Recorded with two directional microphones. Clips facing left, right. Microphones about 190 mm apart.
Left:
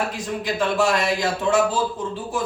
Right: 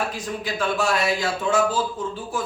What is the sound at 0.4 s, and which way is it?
Speech, 15° left (ahead or behind).